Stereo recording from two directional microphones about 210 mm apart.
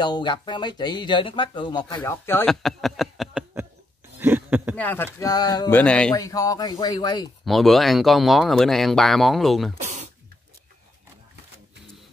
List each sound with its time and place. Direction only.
0.0 s speech: 20° left (ahead or behind); by 3.6 s centre (ahead or behind)
4.2 s a sound: 10° right (ahead or behind)
4.7 s speech: 10° left (ahead or behind)
6.1 s speech: 15° left (ahead or behind)
7.4 s speech: centre (ahead or behind)
9.8 s speech: 35° right (ahead or behind)